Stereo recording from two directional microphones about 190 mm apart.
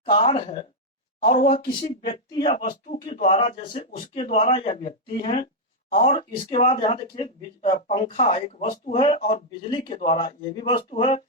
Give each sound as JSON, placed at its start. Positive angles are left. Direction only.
{"t": 0.0, "sound": "speech", "side_deg": 35}
{"t": 2.6, "sound": "speech", "side_deg": 40}
{"t": 5.9, "sound": "speech", "side_deg": 40}